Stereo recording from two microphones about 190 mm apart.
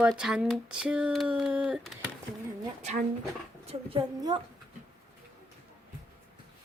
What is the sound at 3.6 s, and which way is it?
Speech, 25° right (ahead or behind).